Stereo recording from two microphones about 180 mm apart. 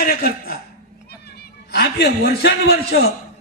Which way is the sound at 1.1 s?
60° left (ahead or behind).